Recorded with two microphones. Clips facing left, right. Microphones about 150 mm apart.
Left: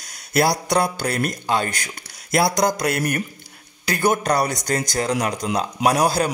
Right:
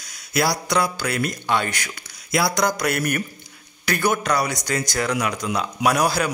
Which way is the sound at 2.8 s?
30° left (ahead or behind).